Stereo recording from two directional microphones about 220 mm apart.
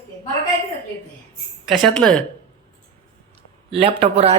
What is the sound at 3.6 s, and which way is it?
Speech, 25° right (ahead or behind).